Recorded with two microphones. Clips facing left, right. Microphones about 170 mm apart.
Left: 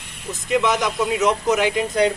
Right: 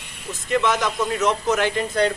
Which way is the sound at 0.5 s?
15° left (ahead or behind).